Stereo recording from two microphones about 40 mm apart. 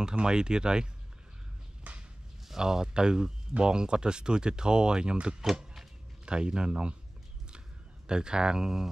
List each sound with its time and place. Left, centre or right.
0.2 s speech: centre
1.9 s a sound: right
2.4 s speech: centre
5.4 s a sound: centre
6.2 s speech: right
8.1 s speech: right